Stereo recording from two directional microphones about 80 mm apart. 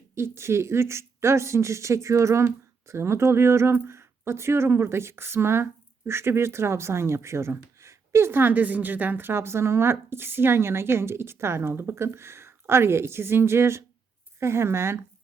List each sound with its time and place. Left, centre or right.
0.1 s speech: right